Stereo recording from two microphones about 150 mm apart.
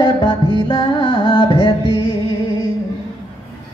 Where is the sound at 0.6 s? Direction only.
30° left (ahead or behind).